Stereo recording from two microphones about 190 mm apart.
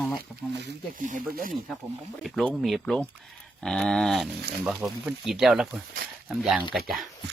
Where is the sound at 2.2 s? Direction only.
Centre (ahead or behind).